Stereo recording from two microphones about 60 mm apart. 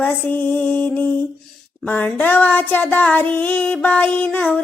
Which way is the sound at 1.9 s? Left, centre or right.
Left.